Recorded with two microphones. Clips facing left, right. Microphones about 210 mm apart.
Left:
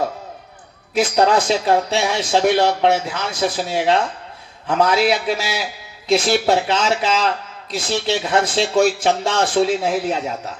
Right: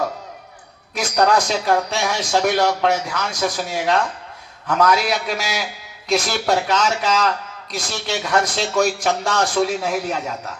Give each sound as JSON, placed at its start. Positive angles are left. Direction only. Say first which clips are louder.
{"t": 0.9, "sound": "speech", "louder": "left 2 dB", "side_deg": 25}